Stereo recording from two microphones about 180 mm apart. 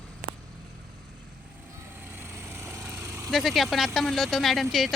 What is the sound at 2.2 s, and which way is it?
Vehicle, 10° right (ahead or behind).